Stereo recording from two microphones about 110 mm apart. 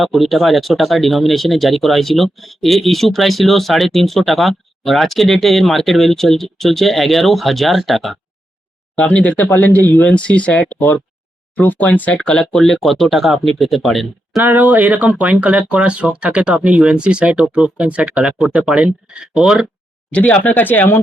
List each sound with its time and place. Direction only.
0.0 s speech: centre (ahead or behind)
9.0 s speech: 10° left (ahead or behind)
14.4 s speech: 15° right (ahead or behind)
20.1 s speech: 10° left (ahead or behind)